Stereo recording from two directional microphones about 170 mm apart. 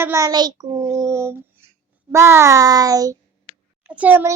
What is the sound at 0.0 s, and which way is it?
A child's voice, 15° right (ahead or behind).